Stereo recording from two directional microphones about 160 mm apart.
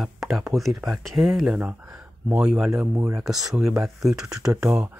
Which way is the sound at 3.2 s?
Centre (ahead or behind).